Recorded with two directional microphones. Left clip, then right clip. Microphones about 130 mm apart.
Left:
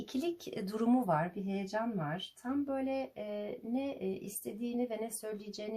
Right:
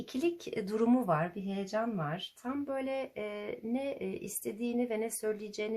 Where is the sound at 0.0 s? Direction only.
20° right (ahead or behind).